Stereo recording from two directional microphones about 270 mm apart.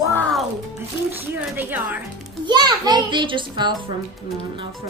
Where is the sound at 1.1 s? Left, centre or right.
Centre.